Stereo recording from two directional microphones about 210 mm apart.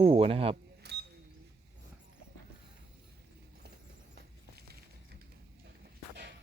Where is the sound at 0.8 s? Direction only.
50° right (ahead or behind).